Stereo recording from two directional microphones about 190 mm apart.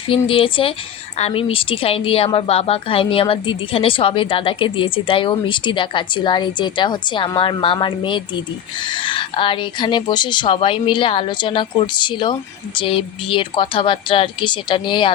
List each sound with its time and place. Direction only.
0.1 s a woman's voice: 30° left (ahead or behind)